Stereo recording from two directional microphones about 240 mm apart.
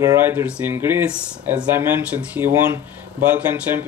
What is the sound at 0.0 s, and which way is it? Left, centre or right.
Speech, centre.